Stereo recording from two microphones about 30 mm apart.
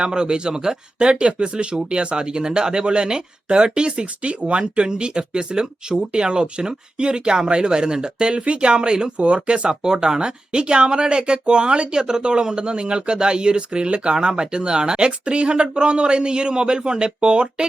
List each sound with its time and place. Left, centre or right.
0.0 s speech: right
0.9 s speech: right
4.0 s speech: right
4.8 s speech: right
9.1 s speech: right